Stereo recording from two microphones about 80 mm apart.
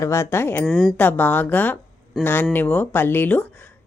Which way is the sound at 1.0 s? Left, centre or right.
Left.